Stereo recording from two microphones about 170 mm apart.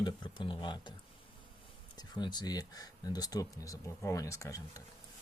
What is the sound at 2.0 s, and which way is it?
Speech, 25° left (ahead or behind).